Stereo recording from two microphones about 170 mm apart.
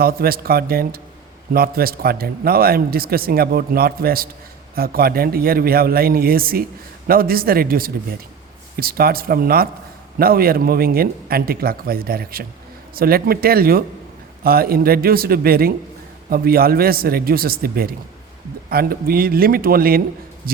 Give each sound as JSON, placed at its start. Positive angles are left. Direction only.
{"t": 0.0, "sound": "speech", "side_deg": -60}